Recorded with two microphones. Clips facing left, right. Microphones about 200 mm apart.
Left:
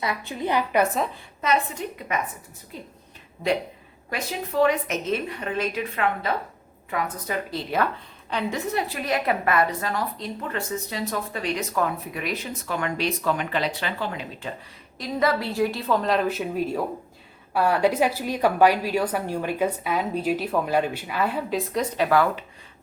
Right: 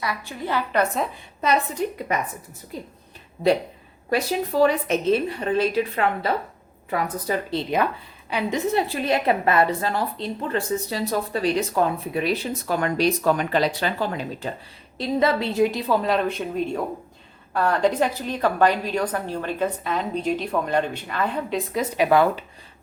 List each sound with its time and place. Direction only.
0.0 s a woman's voice: 20° left (ahead or behind)
2.1 s a woman's voice: 35° right (ahead or behind)
4.1 s a woman's voice: 35° right (ahead or behind)
8.3 s a woman's voice: 10° right (ahead or behind)
8.5 s a woman's voice: 25° right (ahead or behind)
14.9 s a woman's voice: 25° right (ahead or behind)
15.9 s a woman's voice: 5° right (ahead or behind)
21.9 s speech: 15° right (ahead or behind)